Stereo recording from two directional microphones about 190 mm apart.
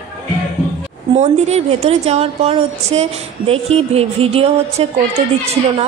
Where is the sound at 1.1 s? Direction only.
35° right (ahead or behind).